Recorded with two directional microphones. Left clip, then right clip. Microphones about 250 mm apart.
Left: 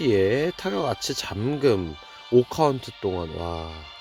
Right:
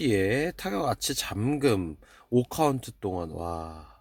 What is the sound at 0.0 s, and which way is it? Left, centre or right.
Speech, centre.